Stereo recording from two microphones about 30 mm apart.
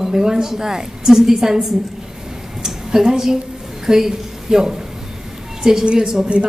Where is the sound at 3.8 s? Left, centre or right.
Centre.